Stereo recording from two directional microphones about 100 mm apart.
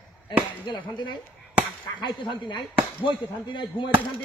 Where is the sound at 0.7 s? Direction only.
50° left (ahead or behind).